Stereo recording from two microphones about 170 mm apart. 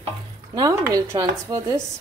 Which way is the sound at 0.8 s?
20° right (ahead or behind).